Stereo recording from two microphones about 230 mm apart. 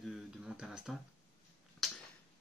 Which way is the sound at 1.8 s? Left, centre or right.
Centre.